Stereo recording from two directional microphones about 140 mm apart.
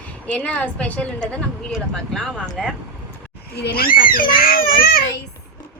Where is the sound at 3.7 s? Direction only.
90° left.